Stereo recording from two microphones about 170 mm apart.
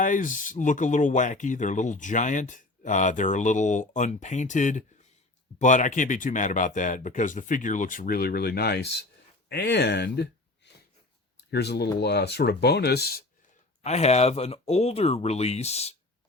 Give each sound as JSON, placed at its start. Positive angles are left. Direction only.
{"t": 0.0, "sound": "speech", "side_deg": 50}
{"t": 13.8, "sound": "speech", "side_deg": 40}